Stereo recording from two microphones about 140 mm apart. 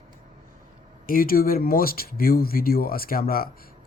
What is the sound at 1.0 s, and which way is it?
Speech, 90° left.